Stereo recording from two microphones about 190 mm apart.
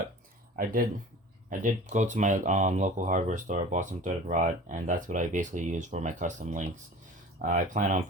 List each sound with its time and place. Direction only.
0.5 s speech: 45° right (ahead or behind)